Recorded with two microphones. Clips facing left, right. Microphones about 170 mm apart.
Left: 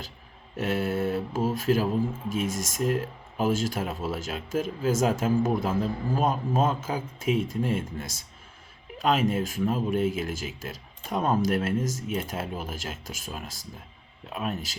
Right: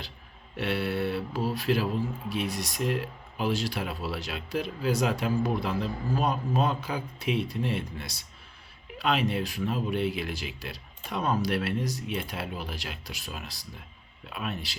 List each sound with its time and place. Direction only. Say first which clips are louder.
0.5 s speech: left 2 dB; 45° left (ahead or behind)